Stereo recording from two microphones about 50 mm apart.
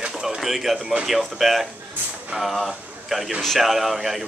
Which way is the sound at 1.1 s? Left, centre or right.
Centre.